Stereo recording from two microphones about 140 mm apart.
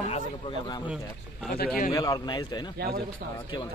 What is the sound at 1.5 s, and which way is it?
Speech, 90° left.